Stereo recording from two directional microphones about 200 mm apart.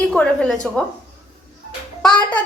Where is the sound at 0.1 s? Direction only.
5° left (ahead or behind).